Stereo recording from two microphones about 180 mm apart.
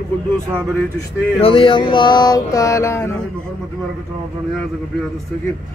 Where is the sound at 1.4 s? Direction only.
30° left (ahead or behind); by 3.2 s 15° left (ahead or behind).